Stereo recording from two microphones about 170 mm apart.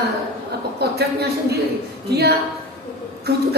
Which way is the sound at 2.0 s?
75° right (ahead or behind).